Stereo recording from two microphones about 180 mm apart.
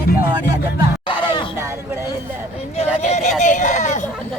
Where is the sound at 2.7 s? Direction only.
40° left (ahead or behind).